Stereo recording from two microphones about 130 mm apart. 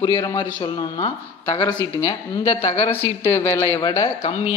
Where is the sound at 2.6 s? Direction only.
50° left (ahead or behind).